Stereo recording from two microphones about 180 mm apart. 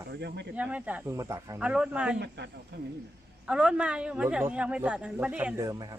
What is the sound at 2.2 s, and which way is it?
Speech, 70° right (ahead or behind).